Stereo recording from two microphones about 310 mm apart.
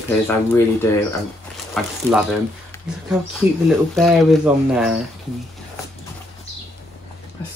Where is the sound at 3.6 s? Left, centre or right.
Centre.